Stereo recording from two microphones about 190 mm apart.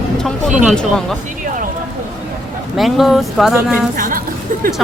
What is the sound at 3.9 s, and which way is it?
Speech, 45° right (ahead or behind).